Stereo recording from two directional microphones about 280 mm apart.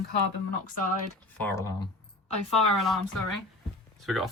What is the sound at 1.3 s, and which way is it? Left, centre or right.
Speech, centre.